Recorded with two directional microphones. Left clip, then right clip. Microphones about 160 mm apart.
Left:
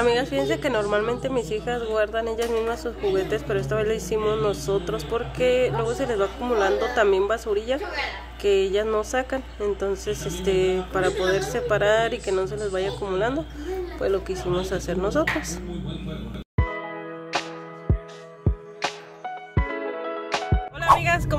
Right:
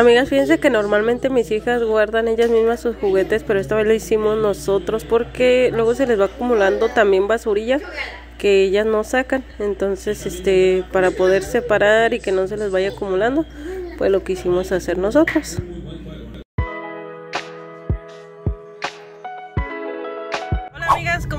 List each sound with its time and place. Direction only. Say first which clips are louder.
0.0 s speech: right 9 dB; 40° right (ahead or behind)
4.2 s speech: right 6 dB; 25° right (ahead or behind)
4.5 s speech: right 6 dB; 40° right (ahead or behind)
13.9 s speech: right 8 dB; 35° right (ahead or behind)
16.5 s music: right 2 dB; centre (ahead or behind)
18.8 s music: right 1 dB; centre (ahead or behind)
21.0 s vehicle: even; 10° left (ahead or behind)